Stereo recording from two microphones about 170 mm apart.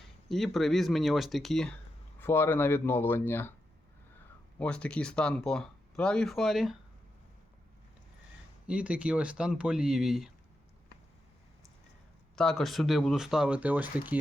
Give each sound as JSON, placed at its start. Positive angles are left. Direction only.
{"t": 0.3, "sound": "speech", "side_deg": 0}
{"t": 2.1, "sound": "speech", "side_deg": 10}
{"t": 4.6, "sound": "speech", "side_deg": 5}
{"t": 8.6, "sound": "speech", "side_deg": -5}
{"t": 12.4, "sound": "speech", "side_deg": 5}